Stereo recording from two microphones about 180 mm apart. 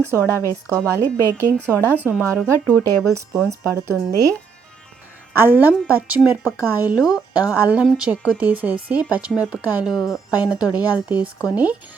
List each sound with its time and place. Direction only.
0.2 s a woman's voice: 15° left (ahead or behind)
0.7 s a woman's voice: 15° right (ahead or behind)
2.4 s speech: 5° left (ahead or behind)
3.6 s a woman's voice: 15° right (ahead or behind)
5.3 s a woman's voice: 10° right (ahead or behind)